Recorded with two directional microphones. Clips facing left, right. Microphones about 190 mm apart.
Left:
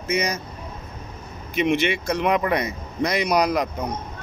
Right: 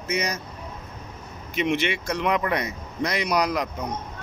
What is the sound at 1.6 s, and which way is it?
A man's voice, 55° left (ahead or behind).